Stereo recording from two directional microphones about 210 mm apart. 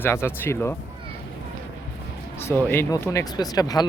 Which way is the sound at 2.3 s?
10° left (ahead or behind).